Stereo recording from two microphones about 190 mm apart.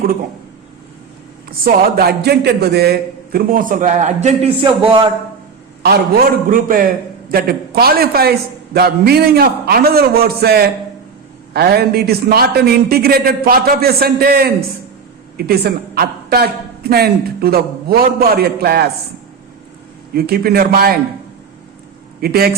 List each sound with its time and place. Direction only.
1.5 s a man's voice: 50° right (ahead or behind); by 5.0 s 25° right (ahead or behind)
5.8 s a man's voice: 50° right (ahead or behind)
20.1 s a man's voice: 50° right (ahead or behind)
22.2 s a man's voice: 55° right (ahead or behind)